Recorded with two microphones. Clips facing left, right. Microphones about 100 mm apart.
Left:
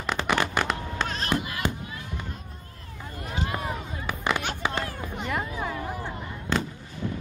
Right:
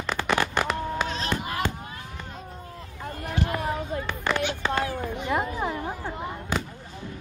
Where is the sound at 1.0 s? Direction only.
50° left (ahead or behind).